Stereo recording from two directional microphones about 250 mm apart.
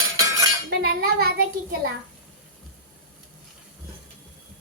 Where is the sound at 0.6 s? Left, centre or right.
Right.